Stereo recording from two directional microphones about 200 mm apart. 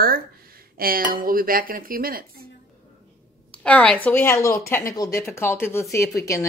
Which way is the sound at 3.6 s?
5° left (ahead or behind).